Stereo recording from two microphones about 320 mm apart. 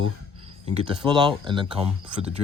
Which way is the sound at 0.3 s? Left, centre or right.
Centre.